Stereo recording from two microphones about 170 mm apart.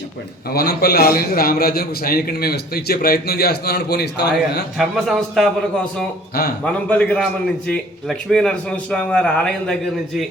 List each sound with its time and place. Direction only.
0.5 s a man's voice: 65° left (ahead or behind)
4.8 s a man's voice: centre (ahead or behind)
6.7 s a man's voice: 10° left (ahead or behind)